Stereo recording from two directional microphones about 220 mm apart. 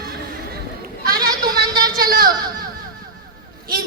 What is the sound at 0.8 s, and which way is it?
Goat, 40° right (ahead or behind).